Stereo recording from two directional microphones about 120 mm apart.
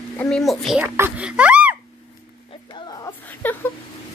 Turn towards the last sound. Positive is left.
turn(degrees=15)  # may be behind; listen again after turning